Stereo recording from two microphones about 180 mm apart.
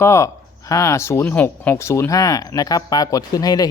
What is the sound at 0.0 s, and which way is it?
Speech, 15° left (ahead or behind).